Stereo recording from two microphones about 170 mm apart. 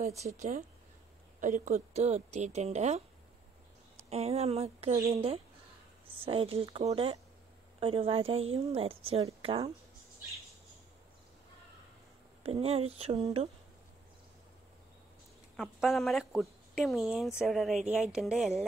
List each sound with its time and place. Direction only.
0.0 s speech: 40° right (ahead or behind)
4.1 s speech: 40° right (ahead or behind)
12.4 s speech: 35° right (ahead or behind)
15.5 s speech: centre (ahead or behind)